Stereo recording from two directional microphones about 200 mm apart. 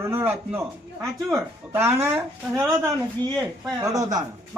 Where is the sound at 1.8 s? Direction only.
10° right (ahead or behind).